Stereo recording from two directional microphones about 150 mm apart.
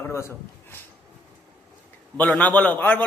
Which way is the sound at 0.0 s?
20° left (ahead or behind).